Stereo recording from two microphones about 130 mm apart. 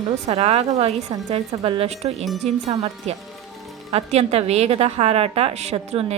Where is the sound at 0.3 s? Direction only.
55° right (ahead or behind).